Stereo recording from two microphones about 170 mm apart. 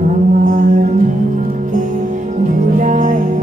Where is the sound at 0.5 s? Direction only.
45° right (ahead or behind).